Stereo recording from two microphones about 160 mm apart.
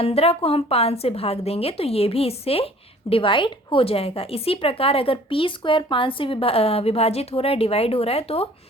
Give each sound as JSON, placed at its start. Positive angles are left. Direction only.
{"t": 0.0, "sound": "a woman's voice", "side_deg": 40}